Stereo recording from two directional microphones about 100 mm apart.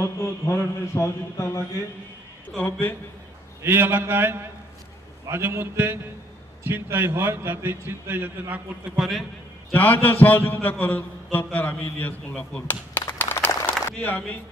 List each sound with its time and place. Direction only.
0.0 s a man's voice: 25° left (ahead or behind)
3.6 s a man's voice: 20° right (ahead or behind)
8.9 s a man's voice: centre (ahead or behind)
9.7 s a man's voice: 15° left (ahead or behind)
13.2 s a sound: 20° left (ahead or behind)